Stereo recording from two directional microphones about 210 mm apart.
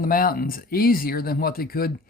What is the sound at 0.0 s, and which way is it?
Speech, 45° left (ahead or behind).